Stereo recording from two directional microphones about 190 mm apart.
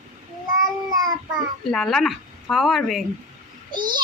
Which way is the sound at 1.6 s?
Centre (ahead or behind).